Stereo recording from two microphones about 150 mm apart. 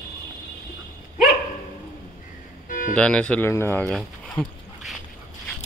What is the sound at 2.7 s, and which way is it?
Music, 60° left (ahead or behind).